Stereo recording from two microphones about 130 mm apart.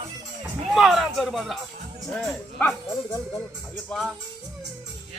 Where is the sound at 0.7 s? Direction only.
Centre (ahead or behind).